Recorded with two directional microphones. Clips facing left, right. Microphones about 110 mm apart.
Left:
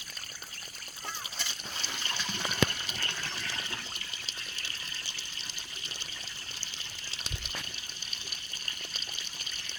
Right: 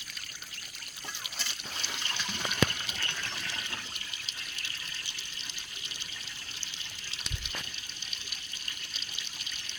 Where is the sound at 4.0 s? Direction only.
35° left (ahead or behind).